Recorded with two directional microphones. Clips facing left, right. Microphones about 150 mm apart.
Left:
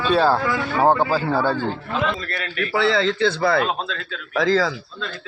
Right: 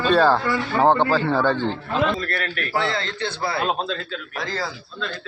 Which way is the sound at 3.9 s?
90° left.